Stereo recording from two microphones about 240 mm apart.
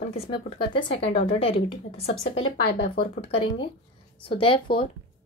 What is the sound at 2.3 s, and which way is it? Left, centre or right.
Speech, left.